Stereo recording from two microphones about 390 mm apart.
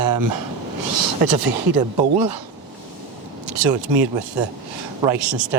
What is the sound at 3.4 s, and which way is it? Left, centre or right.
Speech, right.